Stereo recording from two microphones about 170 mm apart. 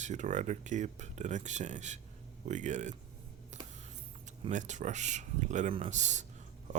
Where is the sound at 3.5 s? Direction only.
45° right (ahead or behind).